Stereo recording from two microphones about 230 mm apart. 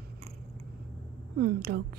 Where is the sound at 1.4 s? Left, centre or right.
Right.